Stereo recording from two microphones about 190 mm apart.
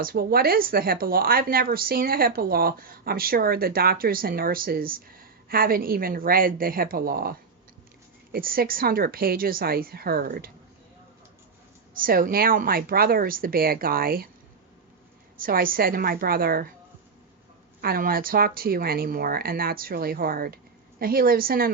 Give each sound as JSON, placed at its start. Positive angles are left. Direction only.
{"t": 0.0, "sound": "a woman's voice", "side_deg": -50}
{"t": 11.9, "sound": "a woman's voice", "side_deg": -45}
{"t": 15.4, "sound": "a woman's voice", "side_deg": -50}
{"t": 17.7, "sound": "a woman's voice", "side_deg": -50}